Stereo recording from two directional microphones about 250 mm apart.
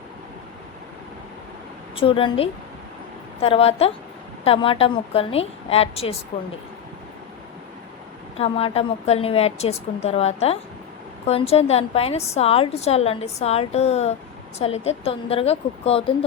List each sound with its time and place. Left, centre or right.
2.0 s a woman's voice: left
8.4 s a woman's voice: left